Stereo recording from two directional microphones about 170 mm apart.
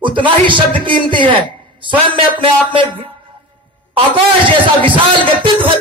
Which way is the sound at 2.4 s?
30° right (ahead or behind).